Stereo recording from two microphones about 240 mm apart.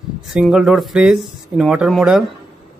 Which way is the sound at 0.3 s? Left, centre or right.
Centre.